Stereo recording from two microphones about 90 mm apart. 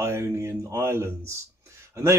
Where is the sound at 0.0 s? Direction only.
35° right (ahead or behind).